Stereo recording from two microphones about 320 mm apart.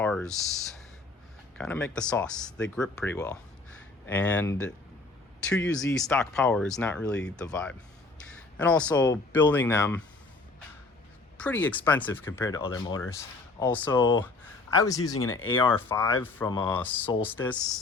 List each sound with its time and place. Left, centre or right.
0.0 s speech: centre
5.9 s speech: centre
11.3 s speech: centre
15.1 s speech: left
15.5 s speech: centre